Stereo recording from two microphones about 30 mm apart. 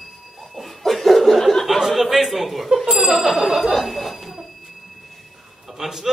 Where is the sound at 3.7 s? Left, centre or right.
Centre.